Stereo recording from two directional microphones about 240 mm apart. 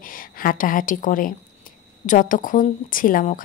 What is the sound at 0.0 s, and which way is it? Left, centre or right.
A woman's voice, left.